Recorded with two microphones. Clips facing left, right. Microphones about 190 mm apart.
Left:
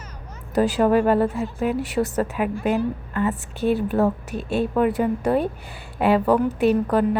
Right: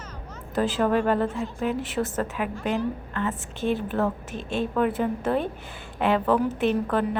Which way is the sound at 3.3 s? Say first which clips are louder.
Left 4 dB; 40° left (ahead or behind).